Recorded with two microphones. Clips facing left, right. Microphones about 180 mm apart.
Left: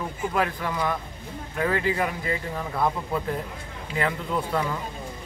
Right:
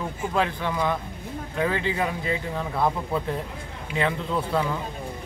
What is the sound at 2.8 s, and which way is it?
Speech, centre (ahead or behind).